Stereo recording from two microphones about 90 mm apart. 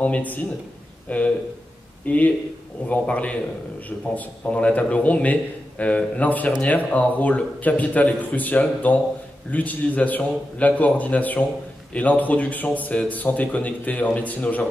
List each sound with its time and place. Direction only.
0.0 s speech: 15° left (ahead or behind)